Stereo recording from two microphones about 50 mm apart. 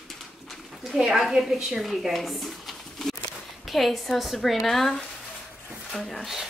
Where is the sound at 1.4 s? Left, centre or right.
Centre.